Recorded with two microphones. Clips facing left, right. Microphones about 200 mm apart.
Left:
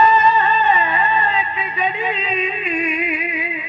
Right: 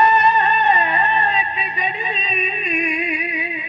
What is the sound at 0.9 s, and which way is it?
Music, 25° right (ahead or behind).